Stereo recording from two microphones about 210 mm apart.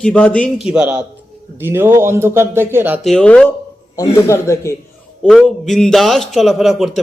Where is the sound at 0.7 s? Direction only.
5° right (ahead or behind).